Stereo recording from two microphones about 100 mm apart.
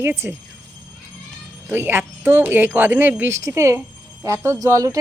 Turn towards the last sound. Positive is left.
turn(degrees=-35)  # may be behind; listen again after turning